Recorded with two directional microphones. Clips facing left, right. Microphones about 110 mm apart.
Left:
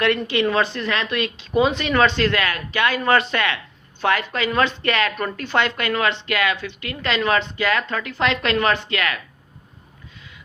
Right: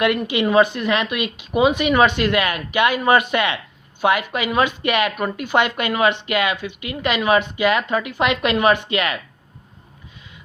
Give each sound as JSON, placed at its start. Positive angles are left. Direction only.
{"t": 0.0, "sound": "speech", "side_deg": -15}